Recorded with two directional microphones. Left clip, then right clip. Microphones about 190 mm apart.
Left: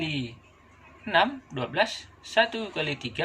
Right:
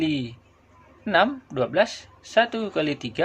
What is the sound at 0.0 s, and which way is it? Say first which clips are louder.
Speech: right 6 dB; 65° right (ahead or behind).